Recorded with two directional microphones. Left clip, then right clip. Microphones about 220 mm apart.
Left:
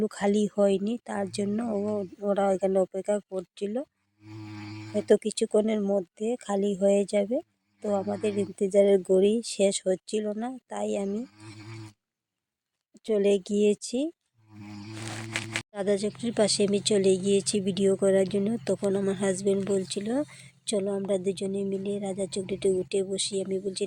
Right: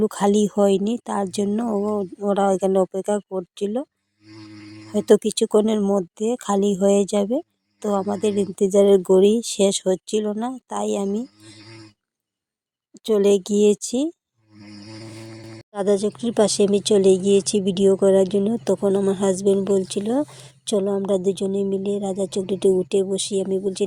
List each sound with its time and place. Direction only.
0.0 s speech: 40° right (ahead or behind)
4.9 s speech: 40° right (ahead or behind)
12.9 s speech: 45° right (ahead or behind)
15.7 s speech: 30° right (ahead or behind)